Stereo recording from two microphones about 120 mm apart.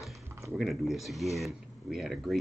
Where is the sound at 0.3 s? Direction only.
20° right (ahead or behind).